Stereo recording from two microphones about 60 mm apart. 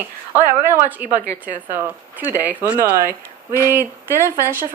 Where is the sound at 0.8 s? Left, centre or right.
Right.